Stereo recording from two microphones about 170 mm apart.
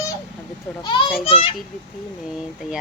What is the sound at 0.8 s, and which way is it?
Speech, 25° left (ahead or behind).